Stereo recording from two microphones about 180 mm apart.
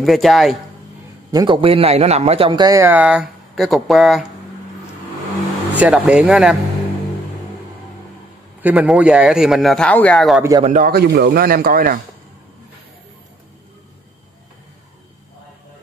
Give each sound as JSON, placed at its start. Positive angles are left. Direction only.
{"t": 0.0, "sound": "speech", "side_deg": 0}
{"t": 1.3, "sound": "a man's voice", "side_deg": -25}
{"t": 5.7, "sound": "speech", "side_deg": -5}
{"t": 8.6, "sound": "speech", "side_deg": -5}
{"t": 10.6, "sound": "a man's voice", "side_deg": -45}
{"t": 10.9, "sound": "speech", "side_deg": -65}